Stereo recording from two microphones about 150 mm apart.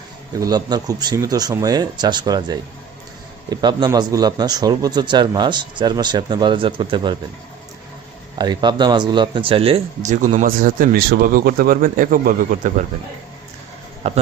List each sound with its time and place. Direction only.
0.3 s a man's voice: 25° right (ahead or behind)
8.4 s speech: 30° right (ahead or behind)
10.0 s speech: 55° right (ahead or behind)
14.0 s a man's voice: 45° right (ahead or behind)